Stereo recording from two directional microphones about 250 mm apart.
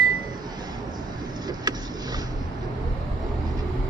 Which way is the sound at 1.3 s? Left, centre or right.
Centre.